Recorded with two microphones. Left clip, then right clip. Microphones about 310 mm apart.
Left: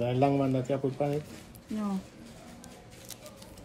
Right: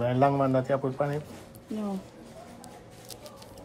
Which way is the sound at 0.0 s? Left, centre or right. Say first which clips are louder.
Right 3 dB; right.